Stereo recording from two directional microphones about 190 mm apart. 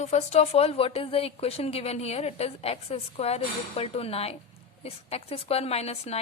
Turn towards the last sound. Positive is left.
turn(degrees=35)  # may be behind; listen again after turning